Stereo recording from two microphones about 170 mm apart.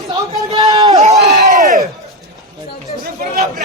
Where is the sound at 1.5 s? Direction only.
45° right (ahead or behind).